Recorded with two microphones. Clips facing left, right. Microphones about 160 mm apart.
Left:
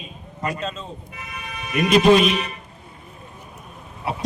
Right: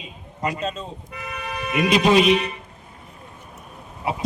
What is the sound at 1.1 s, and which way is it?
Toot, 70° right (ahead or behind).